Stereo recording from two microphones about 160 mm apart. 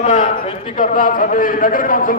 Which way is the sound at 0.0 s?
50° left (ahead or behind).